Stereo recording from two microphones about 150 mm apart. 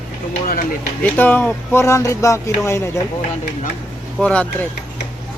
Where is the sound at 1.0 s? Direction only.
10° left (ahead or behind).